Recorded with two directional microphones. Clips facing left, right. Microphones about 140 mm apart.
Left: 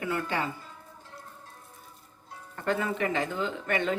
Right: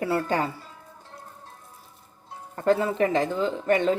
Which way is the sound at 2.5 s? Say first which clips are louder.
Right 7 dB; 35° right (ahead or behind).